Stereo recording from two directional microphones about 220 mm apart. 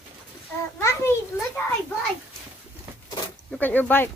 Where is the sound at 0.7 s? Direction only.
10° left (ahead or behind).